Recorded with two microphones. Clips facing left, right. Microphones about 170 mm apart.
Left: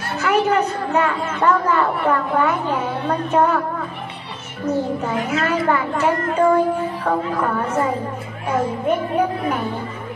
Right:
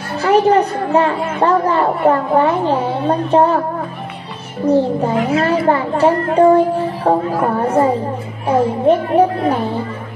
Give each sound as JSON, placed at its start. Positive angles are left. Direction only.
{"t": 0.2, "sound": "a woman's voice", "side_deg": -30}
{"t": 4.6, "sound": "a woman's voice", "side_deg": -30}